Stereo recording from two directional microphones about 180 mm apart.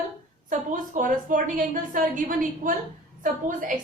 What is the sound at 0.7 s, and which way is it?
A woman's voice, 45° right (ahead or behind).